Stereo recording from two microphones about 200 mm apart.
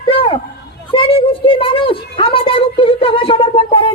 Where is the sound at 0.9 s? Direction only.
25° left (ahead or behind).